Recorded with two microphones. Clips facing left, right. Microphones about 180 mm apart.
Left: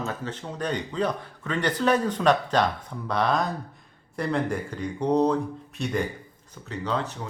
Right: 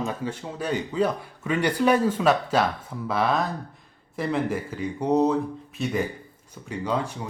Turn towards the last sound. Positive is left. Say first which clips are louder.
# right 2 dB
turn(degrees=-10)  # may be behind; listen again after turning